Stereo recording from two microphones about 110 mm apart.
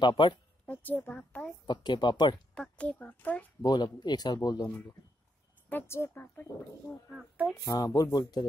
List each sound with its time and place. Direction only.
0.0 s speech: 45° left (ahead or behind)
0.7 s a child's voice: 15° left (ahead or behind)
1.7 s a man's voice: 40° left (ahead or behind)
2.5 s a child's voice: 10° left (ahead or behind)
3.6 s a man's voice: 40° left (ahead or behind)
5.7 s a child's voice: 20° left (ahead or behind)
7.2 s speech: 10° right (ahead or behind)
7.6 s a man's voice: 35° left (ahead or behind)